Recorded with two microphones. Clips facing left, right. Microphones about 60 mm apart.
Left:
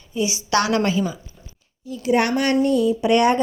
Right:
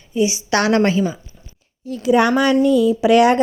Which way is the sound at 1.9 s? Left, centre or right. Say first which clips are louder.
Right 4 dB; right.